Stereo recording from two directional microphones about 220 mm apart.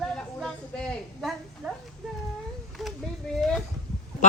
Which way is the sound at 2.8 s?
Centre (ahead or behind).